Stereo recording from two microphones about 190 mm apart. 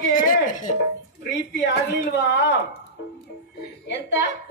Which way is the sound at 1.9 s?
65° left (ahead or behind).